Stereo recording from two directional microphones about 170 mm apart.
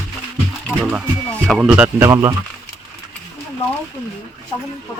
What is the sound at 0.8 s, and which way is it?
Speech, 5° right (ahead or behind).